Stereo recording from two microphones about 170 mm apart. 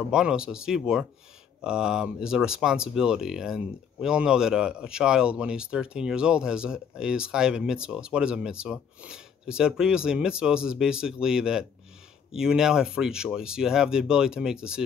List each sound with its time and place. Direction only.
0.1 s speech: 5° right (ahead or behind)